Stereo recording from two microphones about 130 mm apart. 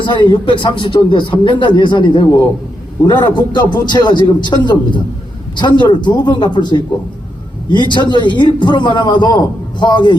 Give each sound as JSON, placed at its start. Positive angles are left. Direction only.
{"t": 0.0, "sound": "a man's voice", "side_deg": 40}